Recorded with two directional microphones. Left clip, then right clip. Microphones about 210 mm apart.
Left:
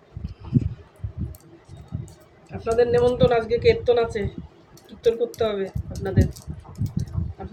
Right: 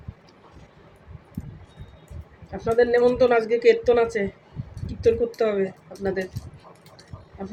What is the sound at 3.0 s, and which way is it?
A woman's voice, 20° right (ahead or behind).